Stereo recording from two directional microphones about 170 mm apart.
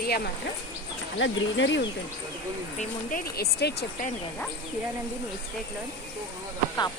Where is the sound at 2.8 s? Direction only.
55° left (ahead or behind); by 4.0 s 75° left (ahead or behind).